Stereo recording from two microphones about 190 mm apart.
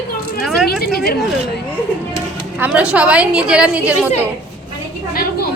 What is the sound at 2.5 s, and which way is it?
A woman's voice, 10° right (ahead or behind).